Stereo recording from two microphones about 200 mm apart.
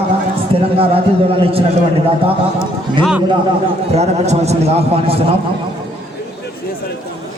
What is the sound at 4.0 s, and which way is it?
A man's voice, 35° right (ahead or behind).